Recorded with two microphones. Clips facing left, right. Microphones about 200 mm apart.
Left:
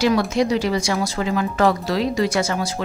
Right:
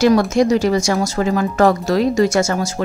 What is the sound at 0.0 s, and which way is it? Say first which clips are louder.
A woman's voice: right 5 dB; 45° right (ahead or behind).